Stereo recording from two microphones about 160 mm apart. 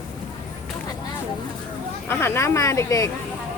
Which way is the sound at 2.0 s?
15° left (ahead or behind).